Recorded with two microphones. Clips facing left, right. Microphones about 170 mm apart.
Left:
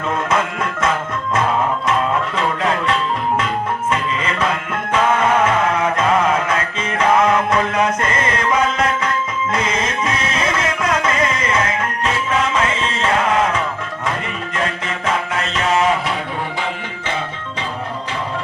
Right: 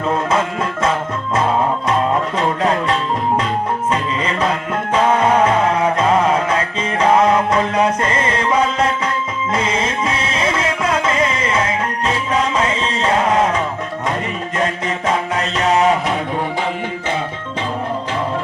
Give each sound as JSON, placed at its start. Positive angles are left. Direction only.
{"t": 0.3, "sound": "music", "side_deg": -30}
{"t": 9.5, "sound": "music", "side_deg": -30}
{"t": 13.0, "sound": "music", "side_deg": -25}
{"t": 13.2, "sound": "music", "side_deg": -35}
{"t": 15.4, "sound": "mantra", "side_deg": -40}